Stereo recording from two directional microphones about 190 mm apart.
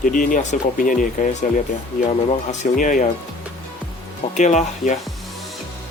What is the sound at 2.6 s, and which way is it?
Speech, 45° left (ahead or behind).